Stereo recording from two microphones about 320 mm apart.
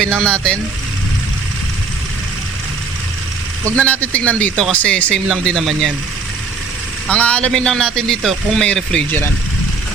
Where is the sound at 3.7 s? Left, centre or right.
Centre.